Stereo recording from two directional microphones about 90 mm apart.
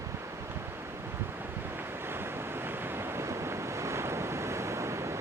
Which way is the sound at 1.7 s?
25° right (ahead or behind).